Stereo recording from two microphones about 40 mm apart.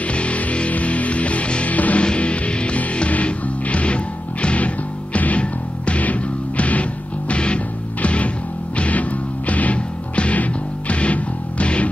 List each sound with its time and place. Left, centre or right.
0.1 s music: left